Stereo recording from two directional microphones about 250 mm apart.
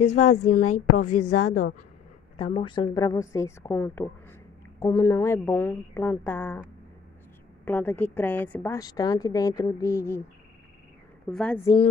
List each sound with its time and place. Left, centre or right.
0.0 s a woman's voice: left
1.3 s speech: left
2.3 s a woman's voice: left
7.6 s a woman's voice: centre
11.2 s a woman's voice: centre